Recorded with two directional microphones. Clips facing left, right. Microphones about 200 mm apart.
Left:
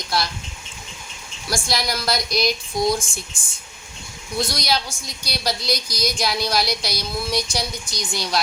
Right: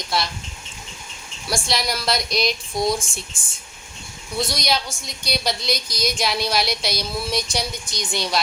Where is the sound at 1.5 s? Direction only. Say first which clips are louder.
Even; centre (ahead or behind).